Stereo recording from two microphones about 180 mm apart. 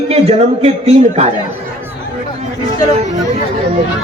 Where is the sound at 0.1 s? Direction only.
35° right (ahead or behind).